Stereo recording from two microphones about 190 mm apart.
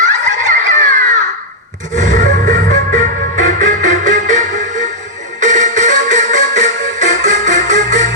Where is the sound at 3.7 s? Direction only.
40° right (ahead or behind).